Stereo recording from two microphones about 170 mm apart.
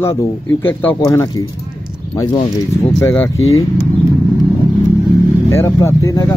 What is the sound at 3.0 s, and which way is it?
Speech, 15° left (ahead or behind).